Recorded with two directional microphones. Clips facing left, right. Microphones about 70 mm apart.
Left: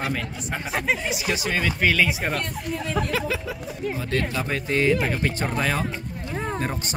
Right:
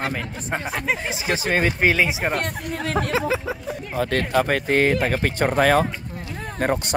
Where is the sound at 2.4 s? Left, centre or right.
Right.